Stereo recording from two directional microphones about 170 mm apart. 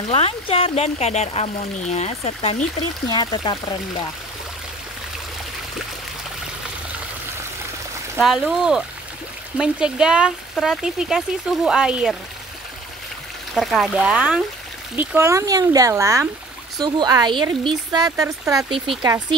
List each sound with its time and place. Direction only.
0.1 s speech: 35° left (ahead or behind)
3.1 s speech: 25° left (ahead or behind)
8.2 s speech: 5° right (ahead or behind)
13.6 s speech: centre (ahead or behind); by 19.2 s 25° right (ahead or behind)